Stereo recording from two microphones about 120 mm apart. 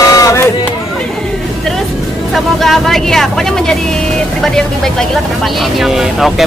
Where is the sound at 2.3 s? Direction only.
Centre (ahead or behind).